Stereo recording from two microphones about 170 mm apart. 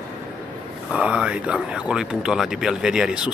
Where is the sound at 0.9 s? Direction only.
5° right (ahead or behind).